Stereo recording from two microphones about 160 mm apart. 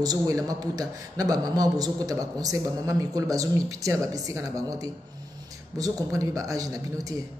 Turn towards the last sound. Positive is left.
turn(degrees=-20)  # may be behind; listen again after turning